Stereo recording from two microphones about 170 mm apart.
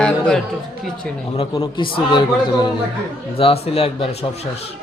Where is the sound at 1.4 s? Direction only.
30° left (ahead or behind).